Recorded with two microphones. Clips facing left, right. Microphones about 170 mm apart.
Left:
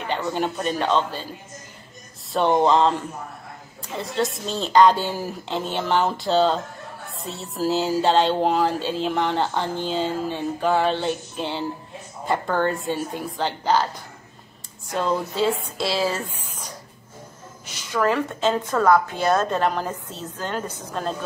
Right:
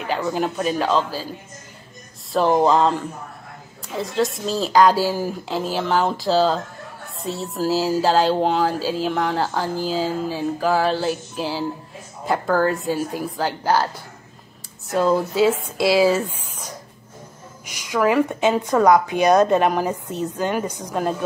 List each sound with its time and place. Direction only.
0.1 s speech: 5° right (ahead or behind)
2.3 s speech: centre (ahead or behind)
14.9 s speech: 5° right (ahead or behind)
17.6 s speech: 10° right (ahead or behind)